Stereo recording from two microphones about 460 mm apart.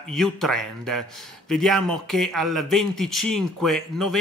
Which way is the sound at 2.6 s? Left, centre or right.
Right.